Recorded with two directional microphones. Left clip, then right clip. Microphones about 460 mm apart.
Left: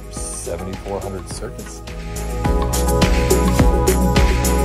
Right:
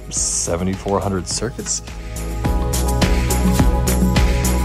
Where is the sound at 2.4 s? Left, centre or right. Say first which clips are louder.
Left 3 dB; centre.